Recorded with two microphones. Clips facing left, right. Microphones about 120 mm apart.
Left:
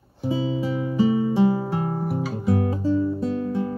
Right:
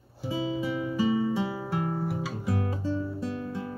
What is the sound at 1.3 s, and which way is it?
Music, 30° left (ahead or behind).